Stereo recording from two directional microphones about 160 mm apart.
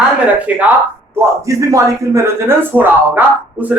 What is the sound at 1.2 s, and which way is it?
Speech, 20° right (ahead or behind).